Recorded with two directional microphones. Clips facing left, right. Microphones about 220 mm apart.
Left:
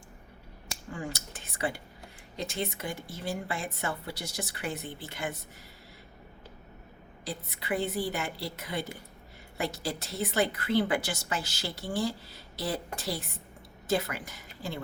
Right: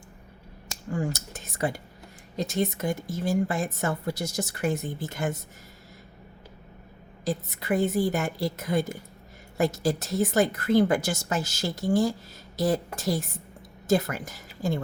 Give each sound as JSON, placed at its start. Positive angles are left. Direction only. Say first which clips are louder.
{"t": 0.9, "sound": "a woman's voice", "louder": "right 8 dB", "side_deg": -45}
{"t": 7.3, "sound": "a woman's voice", "louder": "right 7 dB", "side_deg": -45}